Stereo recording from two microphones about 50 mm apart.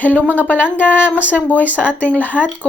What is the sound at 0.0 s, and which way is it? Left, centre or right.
Speech, left.